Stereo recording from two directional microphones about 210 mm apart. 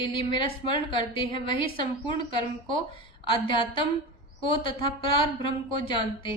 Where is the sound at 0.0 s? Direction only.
25° left (ahead or behind).